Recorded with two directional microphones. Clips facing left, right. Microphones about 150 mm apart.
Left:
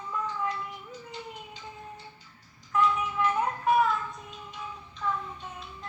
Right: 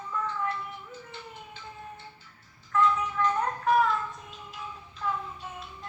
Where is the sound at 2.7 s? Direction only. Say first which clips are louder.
Right 1 dB; 10° left (ahead or behind).